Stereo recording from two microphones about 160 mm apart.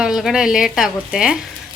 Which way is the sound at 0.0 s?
Centre (ahead or behind).